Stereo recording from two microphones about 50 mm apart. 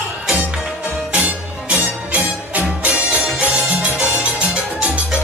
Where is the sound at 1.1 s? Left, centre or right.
Right.